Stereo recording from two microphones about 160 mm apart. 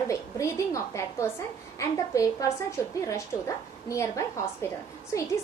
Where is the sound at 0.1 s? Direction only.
20° left (ahead or behind).